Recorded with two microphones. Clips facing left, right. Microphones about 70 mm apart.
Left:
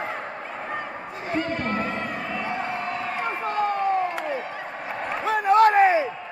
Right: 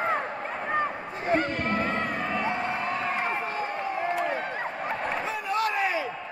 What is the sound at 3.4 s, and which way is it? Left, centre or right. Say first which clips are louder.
Slam: left 6 dB; left.